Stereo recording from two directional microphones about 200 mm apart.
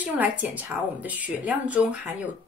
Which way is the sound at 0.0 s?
10° right (ahead or behind).